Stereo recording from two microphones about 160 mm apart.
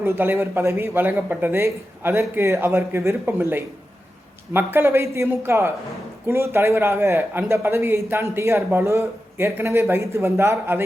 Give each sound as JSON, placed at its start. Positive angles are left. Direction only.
{"t": 0.0, "sound": "a man's voice", "side_deg": -15}